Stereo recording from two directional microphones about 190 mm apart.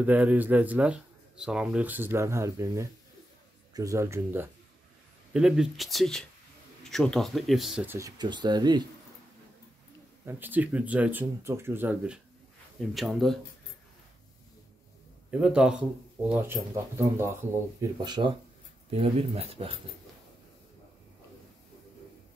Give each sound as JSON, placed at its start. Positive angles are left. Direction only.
{"t": 0.0, "sound": "speech", "side_deg": -10}
{"t": 8.2, "sound": "speech", "side_deg": -25}
{"t": 10.2, "sound": "speech", "side_deg": -10}
{"t": 15.3, "sound": "speech", "side_deg": -5}